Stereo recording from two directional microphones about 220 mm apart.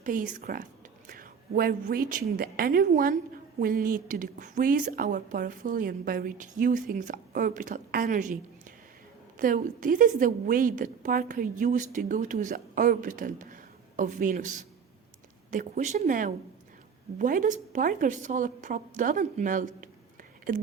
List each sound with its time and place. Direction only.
0.0 s a woman's voice: 35° right (ahead or behind)
9.4 s a woman's voice: 40° right (ahead or behind)